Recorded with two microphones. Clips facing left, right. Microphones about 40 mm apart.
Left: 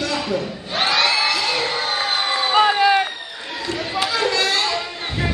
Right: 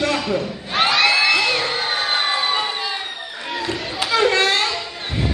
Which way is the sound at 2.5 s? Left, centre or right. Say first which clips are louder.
Left 8 dB; left.